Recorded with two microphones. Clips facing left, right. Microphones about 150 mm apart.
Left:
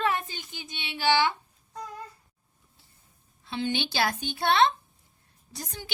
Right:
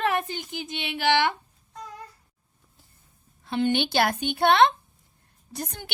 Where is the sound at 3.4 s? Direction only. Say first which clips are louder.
Right 6 dB; 55° right (ahead or behind).